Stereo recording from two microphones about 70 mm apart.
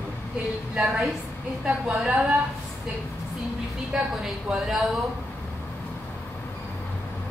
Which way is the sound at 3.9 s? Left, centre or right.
Centre.